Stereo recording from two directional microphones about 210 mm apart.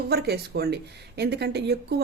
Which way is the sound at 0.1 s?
50° right (ahead or behind).